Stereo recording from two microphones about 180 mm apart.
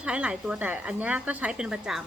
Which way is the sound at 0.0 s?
5° right (ahead or behind).